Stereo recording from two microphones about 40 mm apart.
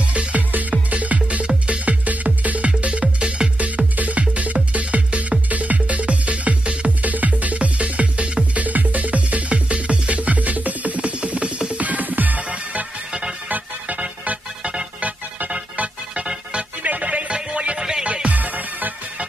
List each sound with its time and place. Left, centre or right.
0.1 s music: right
3.5 s music: right
7.0 s music: right
8.6 s music: right
12.4 s music: right
16.8 s music: right
17.7 s music: centre
18.0 s music: right
18.4 s music: right